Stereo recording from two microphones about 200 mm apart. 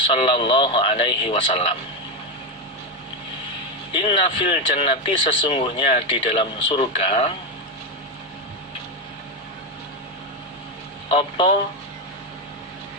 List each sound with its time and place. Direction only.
0.1 s speech: 25° left (ahead or behind)
3.9 s speech: 25° left (ahead or behind)
11.1 s speech: 25° left (ahead or behind)